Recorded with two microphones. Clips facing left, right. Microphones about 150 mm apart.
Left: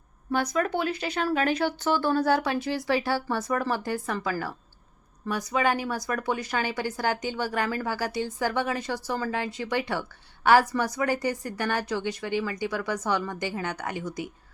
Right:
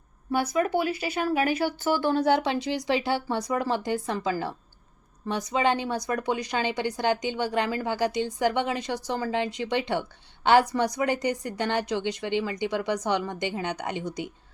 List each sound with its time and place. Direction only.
0.3 s speech: 5° right (ahead or behind)